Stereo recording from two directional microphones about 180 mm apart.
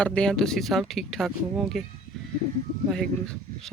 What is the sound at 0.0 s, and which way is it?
Speech, 5° left (ahead or behind).